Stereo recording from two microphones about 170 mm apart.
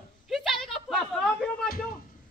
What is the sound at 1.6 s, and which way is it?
Speech, 60° left (ahead or behind).